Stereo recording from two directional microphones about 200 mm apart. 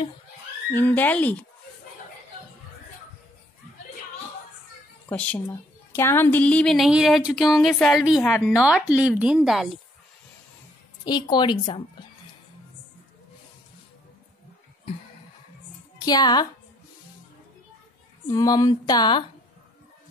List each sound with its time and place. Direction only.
0.7 s speech: 10° left (ahead or behind)
5.0 s a woman's voice: 5° left (ahead or behind)
11.1 s speech: 20° left (ahead or behind)
16.1 s speech: 20° left (ahead or behind)
18.2 s speech: 20° left (ahead or behind)